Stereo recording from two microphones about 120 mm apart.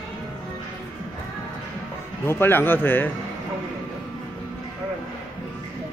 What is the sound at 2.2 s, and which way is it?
Speech, 20° left (ahead or behind).